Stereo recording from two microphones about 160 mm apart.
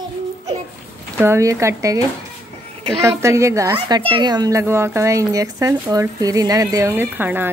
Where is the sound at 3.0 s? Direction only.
15° right (ahead or behind).